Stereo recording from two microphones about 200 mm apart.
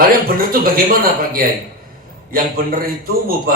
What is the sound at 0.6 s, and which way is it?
A man's voice, 45° right (ahead or behind).